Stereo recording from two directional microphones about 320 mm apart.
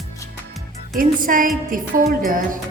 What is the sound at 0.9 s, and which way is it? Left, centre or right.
Music, right.